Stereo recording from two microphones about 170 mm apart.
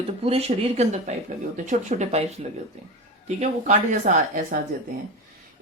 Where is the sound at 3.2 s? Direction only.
45° right (ahead or behind).